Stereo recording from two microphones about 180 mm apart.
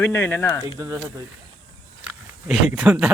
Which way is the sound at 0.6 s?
15° right (ahead or behind).